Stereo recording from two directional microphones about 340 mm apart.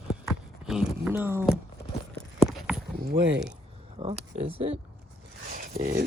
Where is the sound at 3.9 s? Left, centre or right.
Centre.